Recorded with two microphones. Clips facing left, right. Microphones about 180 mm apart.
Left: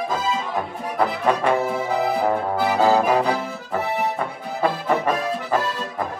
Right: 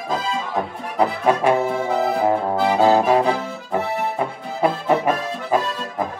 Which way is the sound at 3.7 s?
15° right (ahead or behind).